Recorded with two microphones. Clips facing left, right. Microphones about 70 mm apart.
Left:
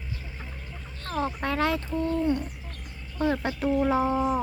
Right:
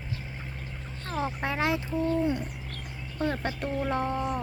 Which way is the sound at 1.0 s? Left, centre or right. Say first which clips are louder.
Left 2 dB; centre.